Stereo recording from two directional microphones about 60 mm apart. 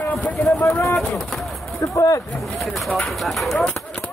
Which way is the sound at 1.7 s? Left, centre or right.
Left.